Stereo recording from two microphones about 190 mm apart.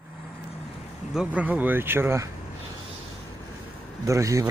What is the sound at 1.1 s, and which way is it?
Speech, 5° right (ahead or behind).